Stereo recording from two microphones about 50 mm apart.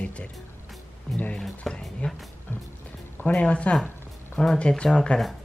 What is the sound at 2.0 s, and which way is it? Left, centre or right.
Speech, left.